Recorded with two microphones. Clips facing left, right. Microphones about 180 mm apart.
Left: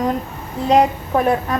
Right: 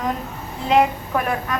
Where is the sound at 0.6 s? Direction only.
35° left (ahead or behind).